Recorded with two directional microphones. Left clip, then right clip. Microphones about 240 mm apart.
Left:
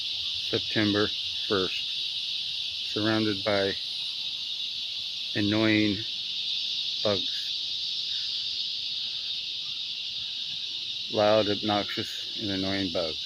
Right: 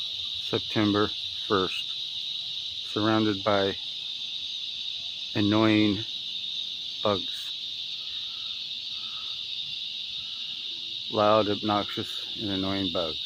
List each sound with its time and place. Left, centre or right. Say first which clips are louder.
0.5 s cricket: right 1 dB; centre
2.9 s cricket: right 3 dB; centre
5.4 s cricket: right 2 dB; centre
11.1 s cricket: right 1 dB; centre